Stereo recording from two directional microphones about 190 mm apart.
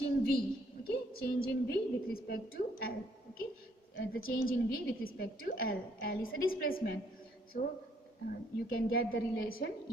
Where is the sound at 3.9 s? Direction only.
50° left (ahead or behind).